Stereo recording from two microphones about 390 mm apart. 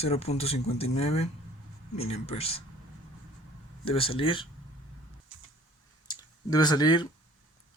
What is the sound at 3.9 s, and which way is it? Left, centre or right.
Speech, centre.